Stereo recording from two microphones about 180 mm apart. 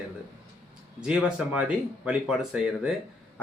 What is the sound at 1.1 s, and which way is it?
Speech, 5° right (ahead or behind).